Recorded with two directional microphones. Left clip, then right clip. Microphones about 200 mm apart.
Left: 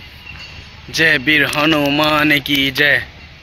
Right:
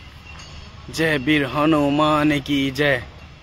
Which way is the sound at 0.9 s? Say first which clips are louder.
Left 7 dB; 10° right (ahead or behind).